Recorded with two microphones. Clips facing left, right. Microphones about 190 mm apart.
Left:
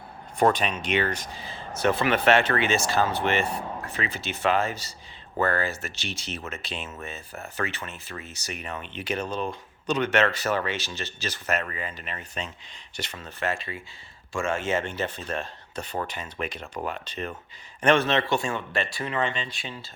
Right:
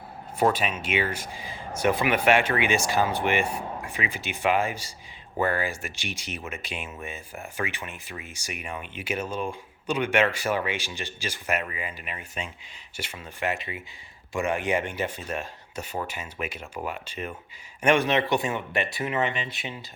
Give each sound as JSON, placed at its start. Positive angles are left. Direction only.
{"t": 0.3, "sound": "speech", "side_deg": -5}